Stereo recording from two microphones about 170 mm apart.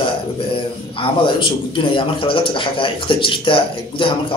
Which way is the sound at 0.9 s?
30° left (ahead or behind).